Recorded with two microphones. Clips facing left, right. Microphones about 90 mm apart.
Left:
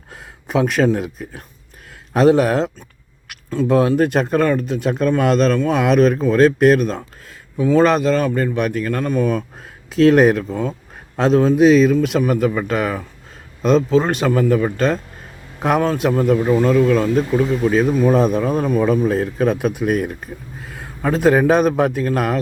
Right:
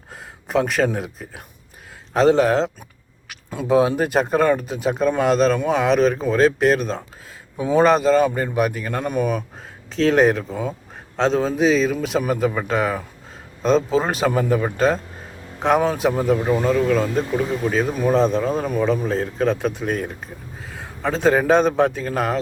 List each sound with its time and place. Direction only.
0.1 s a sound: centre (ahead or behind)
0.9 s speech: centre (ahead or behind)
3.5 s speech: 10° right (ahead or behind)
7.5 s speech: 15° right (ahead or behind)
7.9 s speech: centre (ahead or behind)
8.9 s speech: 15° right (ahead or behind)
9.9 s speech: 5° left (ahead or behind)
16.0 s speech: centre (ahead or behind)